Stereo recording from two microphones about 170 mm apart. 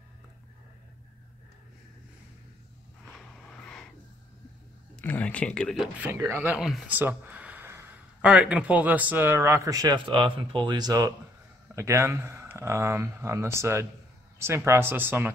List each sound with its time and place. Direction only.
3.1 s a sound: 5° left (ahead or behind)
5.0 s speech: 10° left (ahead or behind)
5.9 s speech: 15° right (ahead or behind)